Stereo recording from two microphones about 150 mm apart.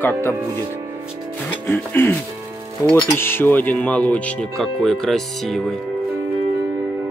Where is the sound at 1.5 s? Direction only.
15° left (ahead or behind).